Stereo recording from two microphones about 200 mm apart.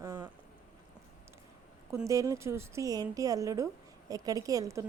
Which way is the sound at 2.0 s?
15° right (ahead or behind).